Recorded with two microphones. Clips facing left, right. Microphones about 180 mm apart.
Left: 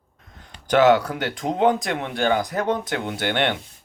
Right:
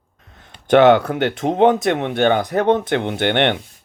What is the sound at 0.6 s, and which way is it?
Speech, 60° right (ahead or behind).